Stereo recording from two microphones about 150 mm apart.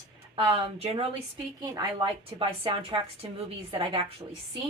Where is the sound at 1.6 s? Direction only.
30° right (ahead or behind).